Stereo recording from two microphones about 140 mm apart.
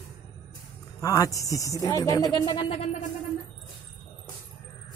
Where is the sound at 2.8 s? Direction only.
50° left (ahead or behind).